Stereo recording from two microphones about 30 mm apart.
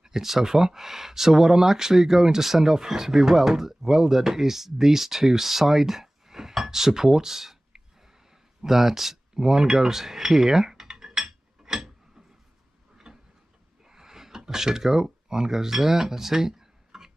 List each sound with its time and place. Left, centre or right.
0.0 s speech: centre
8.6 s speech: centre
9.3 s speech: right
9.8 s dishes: centre
12.9 s a sound: centre